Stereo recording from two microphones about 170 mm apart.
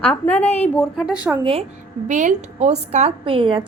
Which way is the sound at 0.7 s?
Centre (ahead or behind).